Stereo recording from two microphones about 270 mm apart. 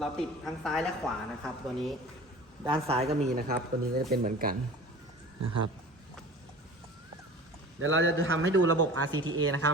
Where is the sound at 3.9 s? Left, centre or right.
Right.